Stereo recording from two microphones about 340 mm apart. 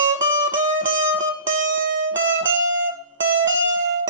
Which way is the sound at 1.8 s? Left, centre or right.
Right.